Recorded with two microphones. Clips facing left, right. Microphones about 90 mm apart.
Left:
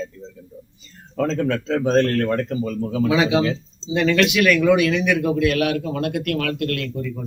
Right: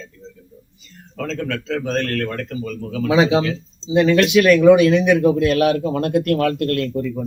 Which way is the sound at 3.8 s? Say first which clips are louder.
Right 3 dB; 20° right (ahead or behind).